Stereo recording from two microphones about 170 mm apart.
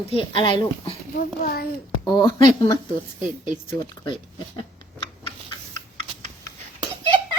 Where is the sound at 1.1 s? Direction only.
60° left (ahead or behind).